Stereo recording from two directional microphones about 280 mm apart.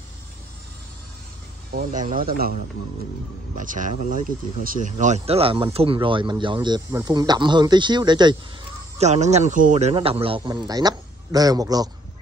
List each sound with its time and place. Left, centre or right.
1.7 s speech: right
3.5 s speech: right